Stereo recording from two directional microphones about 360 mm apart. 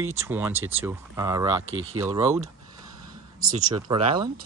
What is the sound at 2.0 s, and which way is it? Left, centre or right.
Speech, centre.